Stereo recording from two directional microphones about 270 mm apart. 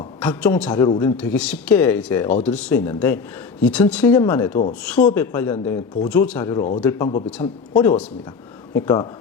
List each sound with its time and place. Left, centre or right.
0.2 s a man's voice: centre
1.1 s a man's voice: centre
7.4 s speech: centre